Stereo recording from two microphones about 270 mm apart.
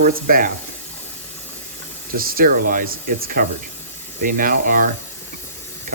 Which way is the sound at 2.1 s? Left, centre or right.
Right.